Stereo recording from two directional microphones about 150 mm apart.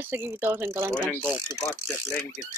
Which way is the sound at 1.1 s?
15° left (ahead or behind).